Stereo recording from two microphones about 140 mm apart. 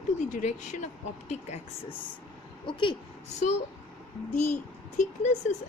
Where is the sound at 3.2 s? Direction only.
55° left (ahead or behind).